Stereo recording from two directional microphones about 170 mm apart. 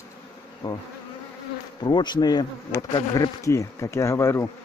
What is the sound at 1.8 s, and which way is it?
Bee, 25° left (ahead or behind).